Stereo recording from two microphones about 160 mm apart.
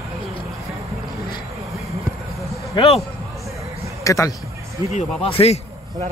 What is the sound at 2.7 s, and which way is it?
Speech, 35° left (ahead or behind).